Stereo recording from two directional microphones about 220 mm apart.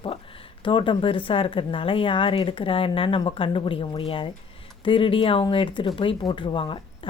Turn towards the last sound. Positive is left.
turn(degrees=20)  # may be behind; listen again after turning